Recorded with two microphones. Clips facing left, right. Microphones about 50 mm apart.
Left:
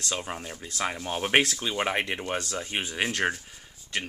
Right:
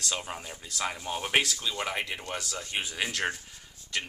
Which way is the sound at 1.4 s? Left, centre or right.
Left.